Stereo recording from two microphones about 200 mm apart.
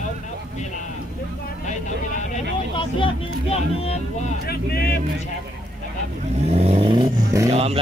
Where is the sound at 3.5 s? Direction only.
30° left (ahead or behind).